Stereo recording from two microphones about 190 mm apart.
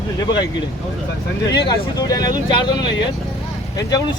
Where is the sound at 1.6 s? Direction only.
20° left (ahead or behind).